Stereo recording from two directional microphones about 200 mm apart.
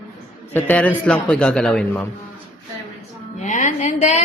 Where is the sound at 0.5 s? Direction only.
5° left (ahead or behind).